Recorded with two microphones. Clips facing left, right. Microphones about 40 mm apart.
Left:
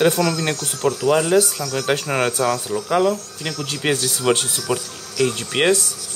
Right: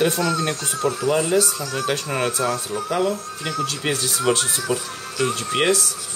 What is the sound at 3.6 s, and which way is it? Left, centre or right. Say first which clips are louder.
Speech: left 3 dB; left.